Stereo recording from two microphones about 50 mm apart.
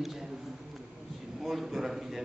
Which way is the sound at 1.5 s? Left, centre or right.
Centre.